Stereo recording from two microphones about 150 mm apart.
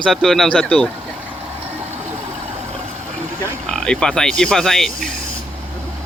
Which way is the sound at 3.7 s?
5° left (ahead or behind).